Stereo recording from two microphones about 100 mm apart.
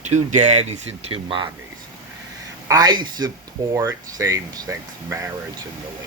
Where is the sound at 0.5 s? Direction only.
90° right.